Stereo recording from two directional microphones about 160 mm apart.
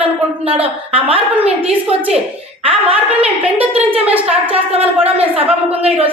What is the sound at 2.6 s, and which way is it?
Speech, 35° right (ahead or behind).